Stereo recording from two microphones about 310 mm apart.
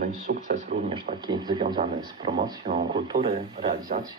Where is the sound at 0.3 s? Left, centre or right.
Right.